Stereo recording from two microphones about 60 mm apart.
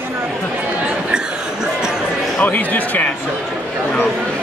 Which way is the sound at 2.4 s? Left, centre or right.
Left.